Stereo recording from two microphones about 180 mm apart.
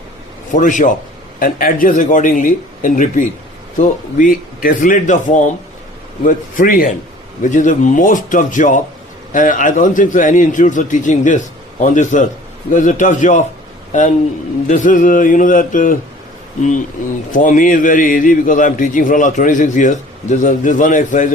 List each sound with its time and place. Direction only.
0.5 s a man's voice: 45° left (ahead or behind)
17.3 s a man's voice: 45° left (ahead or behind)